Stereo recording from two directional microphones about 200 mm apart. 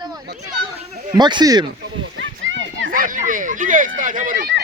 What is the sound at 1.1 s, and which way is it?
Speech, 20° right (ahead or behind).